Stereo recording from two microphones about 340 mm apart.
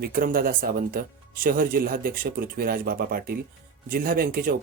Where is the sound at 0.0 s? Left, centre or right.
Right.